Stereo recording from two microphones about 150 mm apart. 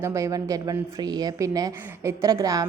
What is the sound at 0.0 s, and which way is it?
A woman's voice, 20° right (ahead or behind).